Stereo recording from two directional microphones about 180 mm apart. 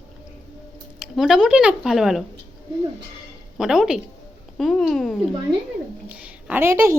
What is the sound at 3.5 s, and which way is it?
A woman's voice, 5° right (ahead or behind).